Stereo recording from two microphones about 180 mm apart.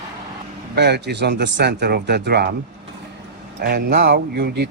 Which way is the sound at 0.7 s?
70° right (ahead or behind).